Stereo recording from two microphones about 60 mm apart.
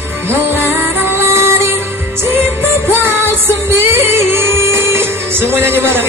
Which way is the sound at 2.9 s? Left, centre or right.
Right.